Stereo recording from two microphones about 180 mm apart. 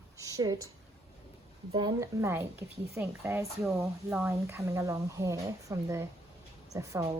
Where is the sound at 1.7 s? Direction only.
20° right (ahead or behind).